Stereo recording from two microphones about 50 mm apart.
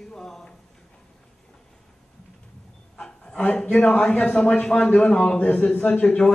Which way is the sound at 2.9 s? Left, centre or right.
Centre.